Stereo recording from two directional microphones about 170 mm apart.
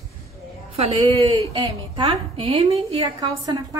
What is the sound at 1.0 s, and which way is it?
A woman's voice, 20° right (ahead or behind).